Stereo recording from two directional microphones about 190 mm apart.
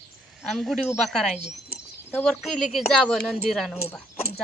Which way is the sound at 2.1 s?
5° left (ahead or behind).